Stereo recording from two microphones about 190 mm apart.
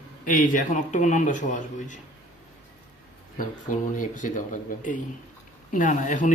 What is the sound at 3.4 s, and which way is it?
Speech, 45° left (ahead or behind).